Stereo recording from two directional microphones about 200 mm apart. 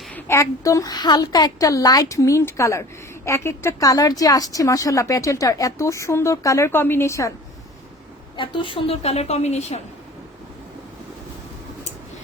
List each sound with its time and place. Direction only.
0.1 s speech: 10° left (ahead or behind)
8.4 s a woman's voice: 25° left (ahead or behind)